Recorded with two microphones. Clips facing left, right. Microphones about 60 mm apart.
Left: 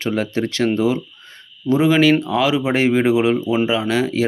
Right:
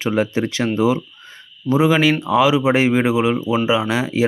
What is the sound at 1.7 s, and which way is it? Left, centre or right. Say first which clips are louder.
Speech: left 1 dB; centre.